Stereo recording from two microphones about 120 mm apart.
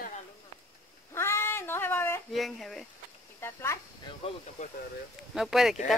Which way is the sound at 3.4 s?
20° left (ahead or behind).